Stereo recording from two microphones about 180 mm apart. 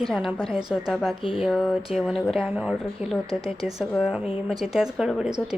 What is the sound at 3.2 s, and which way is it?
Speech, 35° left (ahead or behind).